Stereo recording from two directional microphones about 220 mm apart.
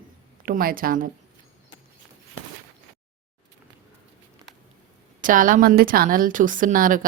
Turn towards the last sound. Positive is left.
turn(degrees=-40)  # may be behind; listen again after turning